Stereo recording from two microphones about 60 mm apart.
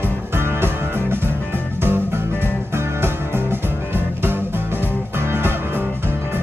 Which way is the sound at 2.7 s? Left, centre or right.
Right.